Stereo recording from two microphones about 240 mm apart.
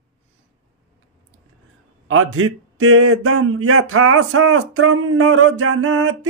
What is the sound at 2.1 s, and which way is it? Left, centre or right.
Speech, right.